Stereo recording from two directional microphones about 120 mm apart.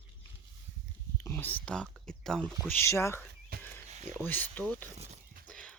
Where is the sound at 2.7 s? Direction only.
20° left (ahead or behind).